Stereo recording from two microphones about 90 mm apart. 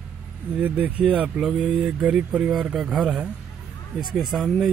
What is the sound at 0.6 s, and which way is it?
Speech, 20° right (ahead or behind).